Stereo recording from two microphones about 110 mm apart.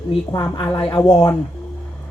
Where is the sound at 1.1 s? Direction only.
30° left (ahead or behind).